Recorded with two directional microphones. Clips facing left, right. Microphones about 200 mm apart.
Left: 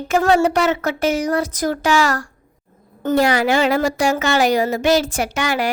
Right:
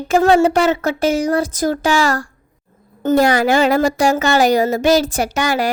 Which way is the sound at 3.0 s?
45° right (ahead or behind).